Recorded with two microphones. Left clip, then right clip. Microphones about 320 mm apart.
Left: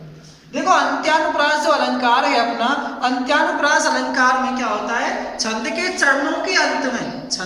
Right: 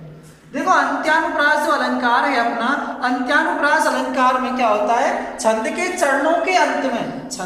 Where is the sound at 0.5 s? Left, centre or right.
Centre.